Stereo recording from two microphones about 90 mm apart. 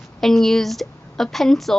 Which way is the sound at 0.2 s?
5° left (ahead or behind).